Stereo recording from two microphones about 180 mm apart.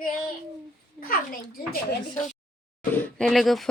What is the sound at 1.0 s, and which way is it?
A child's voice, 55° left (ahead or behind).